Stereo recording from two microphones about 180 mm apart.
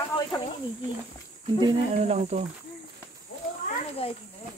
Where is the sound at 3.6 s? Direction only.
35° left (ahead or behind).